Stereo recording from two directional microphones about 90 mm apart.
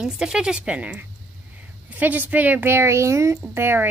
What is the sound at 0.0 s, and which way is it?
A woman's voice, 10° right (ahead or behind).